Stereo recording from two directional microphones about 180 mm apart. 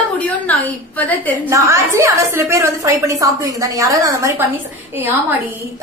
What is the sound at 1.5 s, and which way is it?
A woman's voice, 15° right (ahead or behind).